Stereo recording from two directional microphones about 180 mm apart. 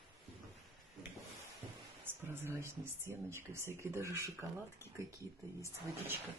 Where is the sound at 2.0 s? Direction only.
10° right (ahead or behind).